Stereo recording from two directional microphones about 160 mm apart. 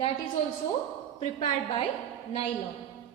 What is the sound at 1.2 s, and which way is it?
Speech, 40° left (ahead or behind).